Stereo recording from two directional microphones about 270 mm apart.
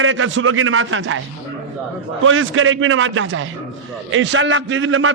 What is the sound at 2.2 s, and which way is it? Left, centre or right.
A man's voice, right.